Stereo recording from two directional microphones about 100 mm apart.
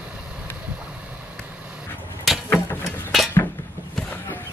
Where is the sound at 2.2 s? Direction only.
Centre (ahead or behind).